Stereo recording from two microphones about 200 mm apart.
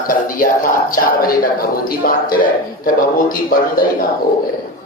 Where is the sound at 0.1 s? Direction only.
45° left (ahead or behind).